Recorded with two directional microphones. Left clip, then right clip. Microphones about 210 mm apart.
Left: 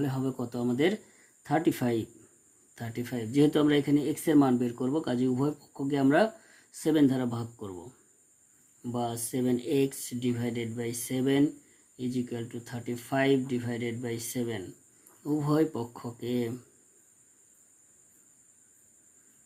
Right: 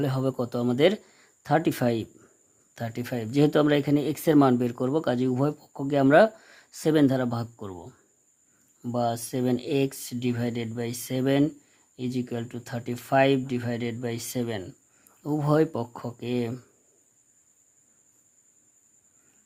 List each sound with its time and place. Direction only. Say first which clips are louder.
0.0 s speech: right 5 dB; 45° right (ahead or behind)
8.8 s speech: right 6 dB; 45° right (ahead or behind)